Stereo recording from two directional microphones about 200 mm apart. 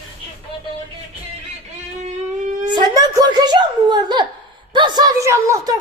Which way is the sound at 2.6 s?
20° right (ahead or behind).